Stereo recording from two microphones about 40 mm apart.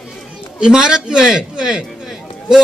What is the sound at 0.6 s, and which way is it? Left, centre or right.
A man's voice, centre.